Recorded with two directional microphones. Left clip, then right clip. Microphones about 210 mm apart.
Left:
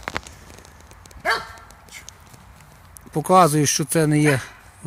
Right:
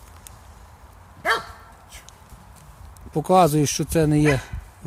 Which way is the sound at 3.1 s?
5° right (ahead or behind).